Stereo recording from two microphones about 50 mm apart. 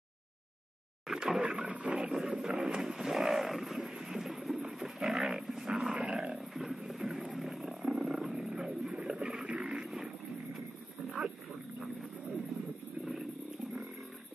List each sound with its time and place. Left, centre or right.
1.0 s a sound: centre
1.4 s speech: right
2.0 s roaring cats: centre
2.5 s wild animals: centre
6.0 s roaring cats: centre
6.3 s roaring cats: centre
7.3 s wild animals: centre
9.6 s vehicle: centre
9.8 s a sound: centre
11.1 s wild animals: centre